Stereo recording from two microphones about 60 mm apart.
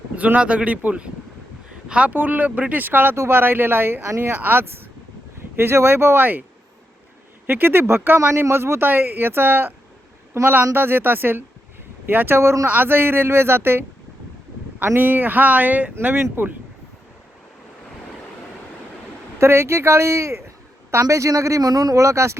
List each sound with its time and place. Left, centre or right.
0.2 s speech: right
7.4 s speech: right
12.6 s speech: right
14.9 s speech: right
16.0 s speech: right
19.4 s speech: right
21.0 s speech: right
22.0 s speech: right